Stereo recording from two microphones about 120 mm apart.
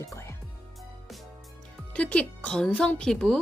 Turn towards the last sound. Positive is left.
turn(degrees=5)  # may be behind; listen again after turning